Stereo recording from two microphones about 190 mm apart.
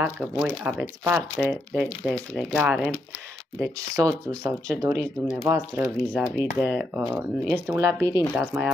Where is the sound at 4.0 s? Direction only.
15° right (ahead or behind).